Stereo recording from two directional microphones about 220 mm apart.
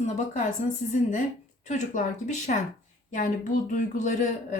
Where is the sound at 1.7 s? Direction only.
35° left (ahead or behind).